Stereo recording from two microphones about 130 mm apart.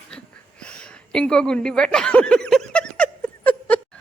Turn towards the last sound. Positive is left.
turn(degrees=10)  # may be behind; listen again after turning